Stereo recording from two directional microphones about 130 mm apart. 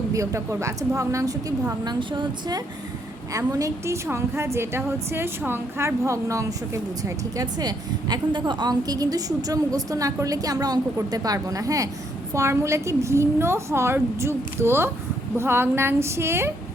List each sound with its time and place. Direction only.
0.1 s a woman's voice: 25° right (ahead or behind)